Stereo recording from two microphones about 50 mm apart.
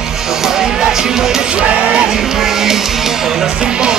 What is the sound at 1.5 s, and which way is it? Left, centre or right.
Speech, right.